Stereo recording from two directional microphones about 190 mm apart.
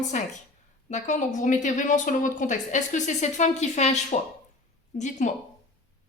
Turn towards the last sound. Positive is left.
turn(degrees=40)  # may be behind; listen again after turning